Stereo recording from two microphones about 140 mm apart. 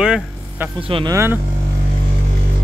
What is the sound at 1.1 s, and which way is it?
Speech, 20° right (ahead or behind).